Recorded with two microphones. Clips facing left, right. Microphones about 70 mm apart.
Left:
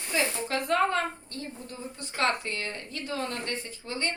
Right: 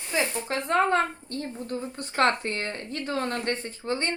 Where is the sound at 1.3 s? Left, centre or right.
Right.